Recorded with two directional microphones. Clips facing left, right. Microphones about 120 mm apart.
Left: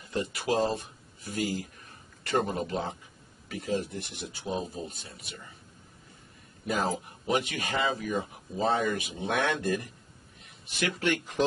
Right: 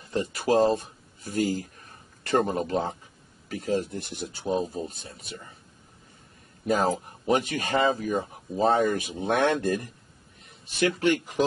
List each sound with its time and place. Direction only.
0.1 s speech: 35° right (ahead or behind)
6.6 s speech: 40° right (ahead or behind)
10.8 s speech: 40° right (ahead or behind)